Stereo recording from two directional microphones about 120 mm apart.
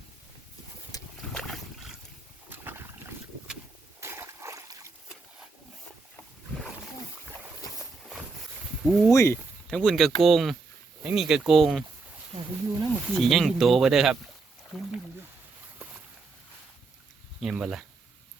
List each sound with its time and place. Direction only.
0.9 s boat: 30° left (ahead or behind)
1.3 s boat: 5° left (ahead or behind)
2.5 s boat: 15° right (ahead or behind)
4.0 s splash: 20° right (ahead or behind)
8.8 s speech: centre (ahead or behind)
9.1 s speech: 20° left (ahead or behind)
9.6 s speech: 5° left (ahead or behind)
12.9 s speech: centre (ahead or behind)
14.7 s a sound: centre (ahead or behind)
17.4 s speech: 5° right (ahead or behind)